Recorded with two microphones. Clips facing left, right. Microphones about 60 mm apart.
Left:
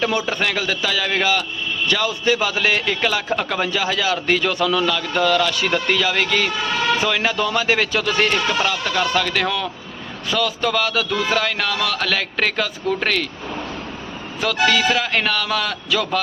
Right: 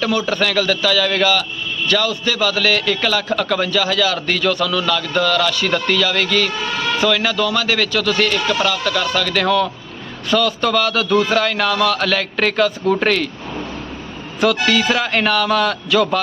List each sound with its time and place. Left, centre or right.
0.0 s a man's voice: left; by 13.2 s centre
14.4 s a man's voice: centre